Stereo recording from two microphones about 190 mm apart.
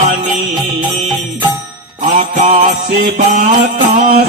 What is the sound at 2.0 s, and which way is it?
Mantra, 35° right (ahead or behind).